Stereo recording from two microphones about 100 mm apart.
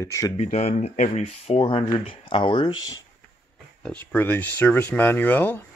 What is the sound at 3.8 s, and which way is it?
Speech, 15° left (ahead or behind).